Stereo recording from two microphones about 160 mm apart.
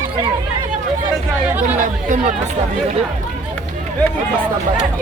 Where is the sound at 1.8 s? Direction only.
50° right (ahead or behind).